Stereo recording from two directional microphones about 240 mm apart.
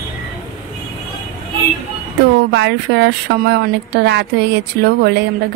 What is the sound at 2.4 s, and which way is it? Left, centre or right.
A woman's voice, right.